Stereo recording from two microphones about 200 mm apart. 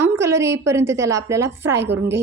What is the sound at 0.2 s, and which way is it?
A woman's voice, 15° right (ahead or behind).